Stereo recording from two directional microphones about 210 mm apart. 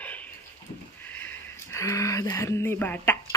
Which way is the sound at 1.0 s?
10° left (ahead or behind).